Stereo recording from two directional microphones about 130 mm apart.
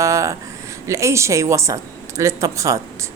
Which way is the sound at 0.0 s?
25° right (ahead or behind).